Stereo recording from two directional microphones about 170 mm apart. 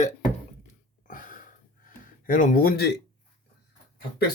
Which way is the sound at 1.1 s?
50° left (ahead or behind).